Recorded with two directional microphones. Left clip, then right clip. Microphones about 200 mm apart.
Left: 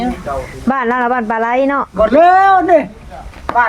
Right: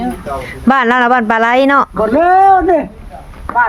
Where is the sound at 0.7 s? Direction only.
25° right (ahead or behind).